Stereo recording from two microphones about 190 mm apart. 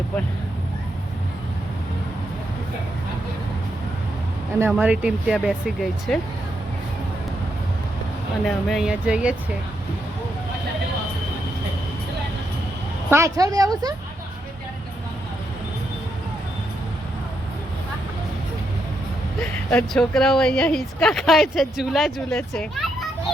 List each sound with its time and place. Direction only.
4.6 s a woman's voice: 5° right (ahead or behind)
8.4 s a woman's voice: centre (ahead or behind)
13.1 s a woman's voice: 15° right (ahead or behind)
19.4 s a woman's voice: 5° left (ahead or behind)